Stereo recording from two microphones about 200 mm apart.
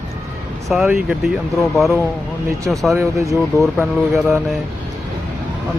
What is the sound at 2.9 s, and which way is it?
Speech, 15° right (ahead or behind).